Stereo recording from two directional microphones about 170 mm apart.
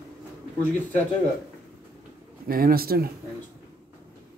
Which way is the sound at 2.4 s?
60° right (ahead or behind).